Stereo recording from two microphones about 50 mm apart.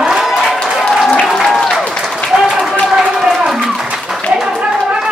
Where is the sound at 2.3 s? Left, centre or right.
Centre.